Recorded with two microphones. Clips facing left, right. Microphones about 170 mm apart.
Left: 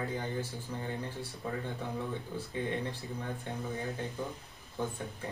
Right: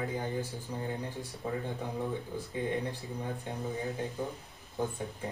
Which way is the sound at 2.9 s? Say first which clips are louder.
Right 1 dB; 15° right (ahead or behind).